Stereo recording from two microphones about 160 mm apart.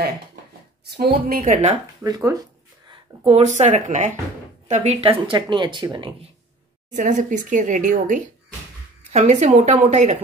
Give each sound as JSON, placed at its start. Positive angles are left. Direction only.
{"t": 0.8, "sound": "a woman's voice", "side_deg": -80}
{"t": 1.4, "sound": "a woman's voice", "side_deg": -50}
{"t": 2.0, "sound": "speech", "side_deg": -25}
{"t": 3.3, "sound": "a woman's voice", "side_deg": -45}
{"t": 6.9, "sound": "a woman's voice", "side_deg": -50}